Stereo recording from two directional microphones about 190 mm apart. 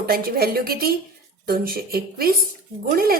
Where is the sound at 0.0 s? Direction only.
55° right (ahead or behind).